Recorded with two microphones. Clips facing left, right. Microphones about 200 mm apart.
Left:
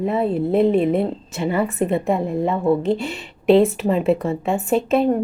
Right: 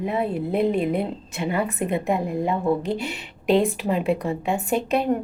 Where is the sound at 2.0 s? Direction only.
Centre (ahead or behind).